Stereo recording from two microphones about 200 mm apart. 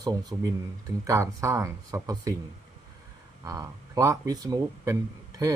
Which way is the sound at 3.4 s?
15° right (ahead or behind).